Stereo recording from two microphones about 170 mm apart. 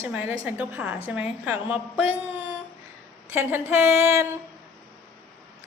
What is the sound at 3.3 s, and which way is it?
A woman's voice, 15° right (ahead or behind).